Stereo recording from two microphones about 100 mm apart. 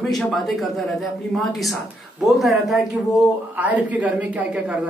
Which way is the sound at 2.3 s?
Centre (ahead or behind).